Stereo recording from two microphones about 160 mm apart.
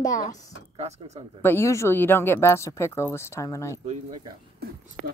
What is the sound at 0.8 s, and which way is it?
Speech, 40° right (ahead or behind).